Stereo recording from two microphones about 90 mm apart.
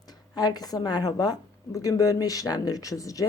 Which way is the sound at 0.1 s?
50° left (ahead or behind).